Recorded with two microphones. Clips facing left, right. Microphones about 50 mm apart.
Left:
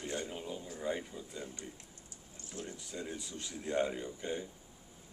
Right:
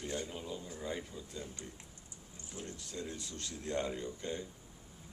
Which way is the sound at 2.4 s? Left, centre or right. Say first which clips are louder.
Left 2 dB; right.